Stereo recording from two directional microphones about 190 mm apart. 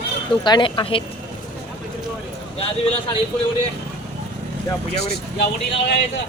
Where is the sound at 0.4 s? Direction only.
25° left (ahead or behind).